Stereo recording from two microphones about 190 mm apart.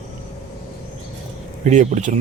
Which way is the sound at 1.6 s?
35° right (ahead or behind).